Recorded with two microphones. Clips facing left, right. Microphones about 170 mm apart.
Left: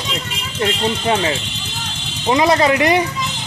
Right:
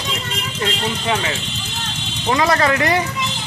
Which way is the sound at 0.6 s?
30° left (ahead or behind).